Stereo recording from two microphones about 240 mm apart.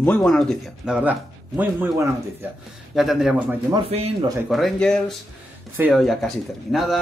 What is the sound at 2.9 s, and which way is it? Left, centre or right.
A man's voice, centre.